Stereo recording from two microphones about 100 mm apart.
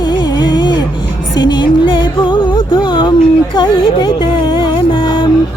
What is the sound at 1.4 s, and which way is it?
Music, 50° left (ahead or behind).